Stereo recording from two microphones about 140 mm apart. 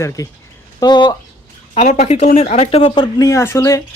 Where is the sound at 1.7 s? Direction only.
55° left (ahead or behind); by 3.2 s 35° left (ahead or behind).